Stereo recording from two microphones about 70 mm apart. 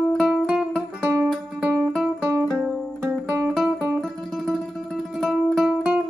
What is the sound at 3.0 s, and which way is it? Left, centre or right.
Music, right.